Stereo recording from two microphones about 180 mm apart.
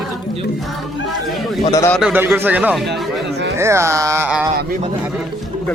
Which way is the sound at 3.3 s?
70° right (ahead or behind).